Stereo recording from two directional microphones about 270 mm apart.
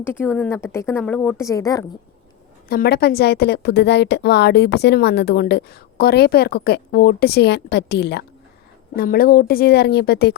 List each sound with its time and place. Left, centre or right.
0.0 s speech: centre
2.6 s a woman's voice: left